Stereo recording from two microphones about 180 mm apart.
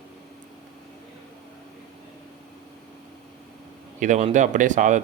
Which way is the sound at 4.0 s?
40° right (ahead or behind).